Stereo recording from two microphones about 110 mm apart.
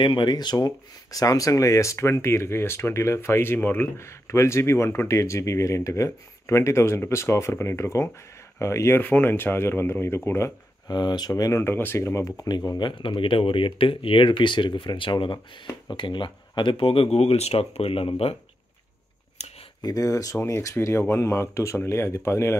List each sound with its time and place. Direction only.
0.0 s speech: 45° left (ahead or behind); by 10.5 s 25° left (ahead or behind)
10.9 s speech: 40° left (ahead or behind); by 18.3 s 60° left (ahead or behind)
19.4 s a sound: 80° left
19.8 s speech: 35° left (ahead or behind)